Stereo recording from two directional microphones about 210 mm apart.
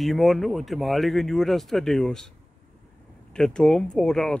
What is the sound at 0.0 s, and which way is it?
Speech, centre (ahead or behind).